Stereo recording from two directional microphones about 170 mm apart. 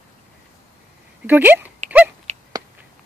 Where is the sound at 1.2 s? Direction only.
10° right (ahead or behind).